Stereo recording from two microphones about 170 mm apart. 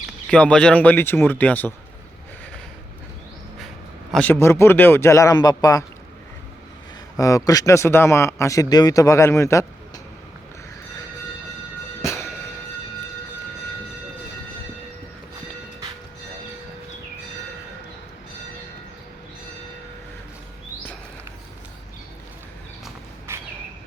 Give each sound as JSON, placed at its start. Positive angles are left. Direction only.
{"t": 0.3, "sound": "speech", "side_deg": 5}
{"t": 4.1, "sound": "speech", "side_deg": 10}
{"t": 7.2, "sound": "speech", "side_deg": 20}
{"t": 12.0, "sound": "music", "side_deg": 15}
{"t": 23.3, "sound": "a sound", "side_deg": -15}